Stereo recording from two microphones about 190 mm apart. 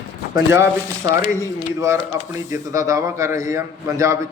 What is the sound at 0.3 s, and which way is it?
Speech, 15° right (ahead or behind).